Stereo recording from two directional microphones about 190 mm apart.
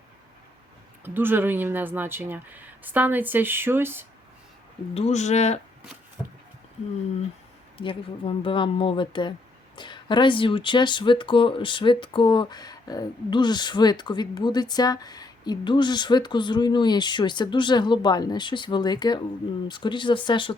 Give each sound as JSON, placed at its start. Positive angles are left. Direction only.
{"t": 1.0, "sound": "speech", "side_deg": -10}
{"t": 4.9, "sound": "speech", "side_deg": 35}
{"t": 7.8, "sound": "speech", "side_deg": 30}